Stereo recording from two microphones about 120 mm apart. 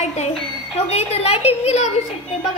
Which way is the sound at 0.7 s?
60° left (ahead or behind).